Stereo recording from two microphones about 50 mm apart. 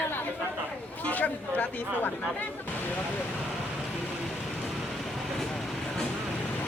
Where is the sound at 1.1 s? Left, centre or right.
Left.